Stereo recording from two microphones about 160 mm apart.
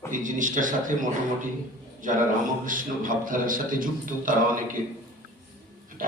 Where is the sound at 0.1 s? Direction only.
55° right (ahead or behind).